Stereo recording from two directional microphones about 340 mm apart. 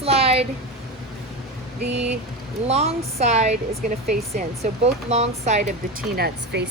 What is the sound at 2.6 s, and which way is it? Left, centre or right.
Speech, centre.